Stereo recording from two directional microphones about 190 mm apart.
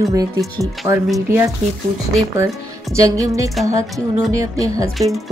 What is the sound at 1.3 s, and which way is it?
Speech, 15° right (ahead or behind).